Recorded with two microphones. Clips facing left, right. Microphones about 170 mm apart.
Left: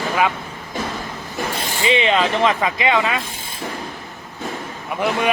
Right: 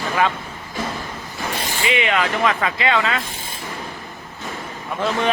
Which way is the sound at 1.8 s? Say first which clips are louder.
Left 3 dB; 25° left (ahead or behind).